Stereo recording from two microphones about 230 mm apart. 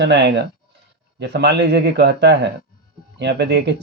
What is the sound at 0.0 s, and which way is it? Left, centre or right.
Speech, right.